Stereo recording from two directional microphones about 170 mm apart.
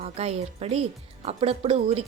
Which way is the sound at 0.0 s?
40° right (ahead or behind).